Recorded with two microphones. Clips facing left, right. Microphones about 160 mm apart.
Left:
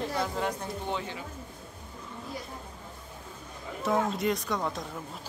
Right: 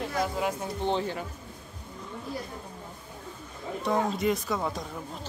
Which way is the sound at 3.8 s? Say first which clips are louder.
Right 1 dB; centre (ahead or behind).